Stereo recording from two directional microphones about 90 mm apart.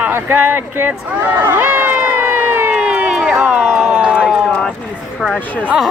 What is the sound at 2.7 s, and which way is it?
Crowd, 10° right (ahead or behind).